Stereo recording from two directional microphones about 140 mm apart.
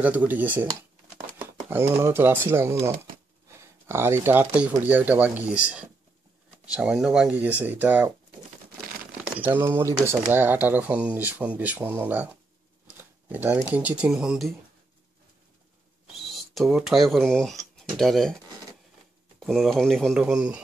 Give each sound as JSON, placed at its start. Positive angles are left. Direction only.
{"t": 0.0, "sound": "speech", "side_deg": -10}
{"t": 1.7, "sound": "speech", "side_deg": -15}
{"t": 6.8, "sound": "speech", "side_deg": -5}
{"t": 9.4, "sound": "speech", "side_deg": -15}
{"t": 12.8, "sound": "a sound", "side_deg": -15}
{"t": 13.7, "sound": "speech", "side_deg": -10}
{"t": 16.1, "sound": "speech", "side_deg": 0}
{"t": 19.4, "sound": "speech", "side_deg": 0}